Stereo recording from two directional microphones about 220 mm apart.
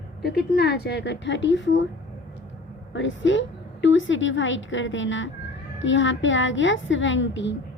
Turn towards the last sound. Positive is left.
turn(degrees=55)  # may be behind; listen again after turning